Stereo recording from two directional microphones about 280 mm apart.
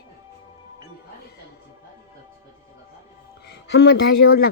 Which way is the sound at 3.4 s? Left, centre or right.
Left.